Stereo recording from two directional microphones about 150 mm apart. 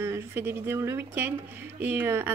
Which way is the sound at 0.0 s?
15° right (ahead or behind).